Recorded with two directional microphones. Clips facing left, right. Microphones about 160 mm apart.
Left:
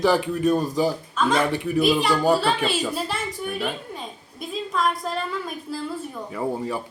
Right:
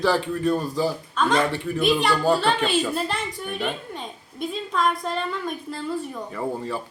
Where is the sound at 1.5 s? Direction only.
15° left (ahead or behind).